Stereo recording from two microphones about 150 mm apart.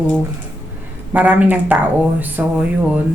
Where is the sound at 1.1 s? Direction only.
10° right (ahead or behind).